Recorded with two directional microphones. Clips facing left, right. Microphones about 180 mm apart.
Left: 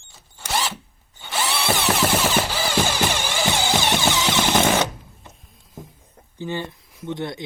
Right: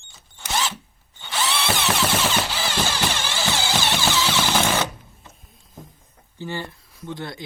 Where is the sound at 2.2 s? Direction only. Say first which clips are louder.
Left 2 dB; 10° left (ahead or behind).